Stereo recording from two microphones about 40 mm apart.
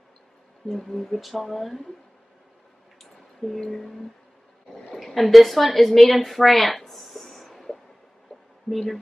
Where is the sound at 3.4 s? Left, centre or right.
Centre.